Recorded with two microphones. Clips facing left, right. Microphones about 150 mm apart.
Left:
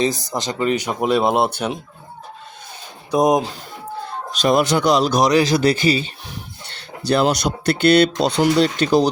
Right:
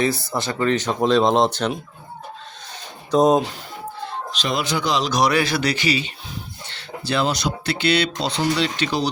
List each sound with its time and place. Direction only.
0.0 s speech: 20° left (ahead or behind)
3.1 s speech: 15° left (ahead or behind)
4.3 s speech: 45° left (ahead or behind)
7.1 s speech: 45° left (ahead or behind)